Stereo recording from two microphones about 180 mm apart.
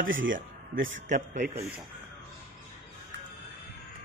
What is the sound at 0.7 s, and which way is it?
Speech, 90° right.